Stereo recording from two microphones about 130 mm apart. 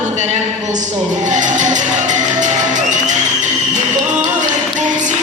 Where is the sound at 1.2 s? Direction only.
70° right (ahead or behind).